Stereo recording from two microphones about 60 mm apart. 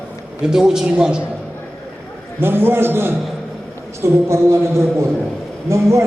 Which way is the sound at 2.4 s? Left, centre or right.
Right.